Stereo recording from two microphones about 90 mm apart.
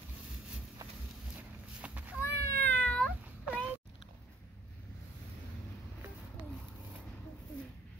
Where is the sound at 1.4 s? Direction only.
20° right (ahead or behind).